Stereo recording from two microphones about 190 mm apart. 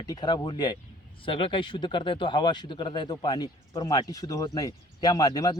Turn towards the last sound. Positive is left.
turn(degrees=20)  # may be behind; listen again after turning